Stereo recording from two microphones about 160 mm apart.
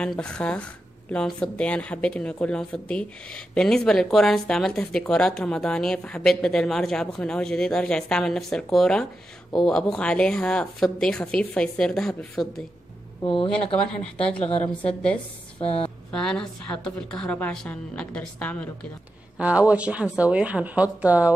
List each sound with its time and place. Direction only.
0.0 s a woman's voice: 5° left (ahead or behind)
13.2 s speech: 30° left (ahead or behind)
14.6 s a woman's voice: 10° left (ahead or behind)
15.6 s speech: 35° left (ahead or behind)
16.1 s speech: 5° left (ahead or behind)
19.3 s speech: 10° right (ahead or behind)